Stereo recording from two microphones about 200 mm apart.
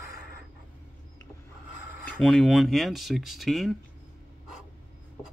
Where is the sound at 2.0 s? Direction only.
5° left (ahead or behind).